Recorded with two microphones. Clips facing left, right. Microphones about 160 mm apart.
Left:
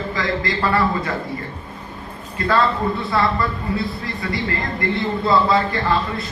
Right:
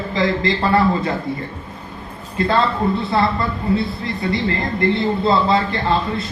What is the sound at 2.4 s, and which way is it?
Speech, 25° right (ahead or behind).